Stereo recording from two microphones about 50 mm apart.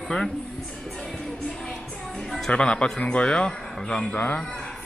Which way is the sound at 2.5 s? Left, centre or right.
Left.